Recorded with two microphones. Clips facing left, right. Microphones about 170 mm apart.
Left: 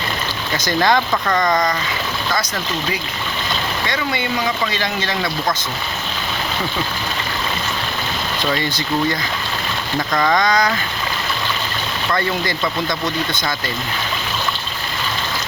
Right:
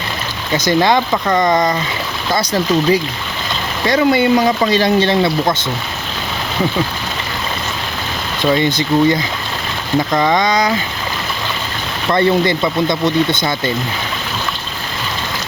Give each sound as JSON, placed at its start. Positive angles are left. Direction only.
{"t": 0.5, "sound": "speech", "side_deg": -20}
{"t": 8.4, "sound": "speech", "side_deg": -20}
{"t": 12.1, "sound": "speech", "side_deg": -25}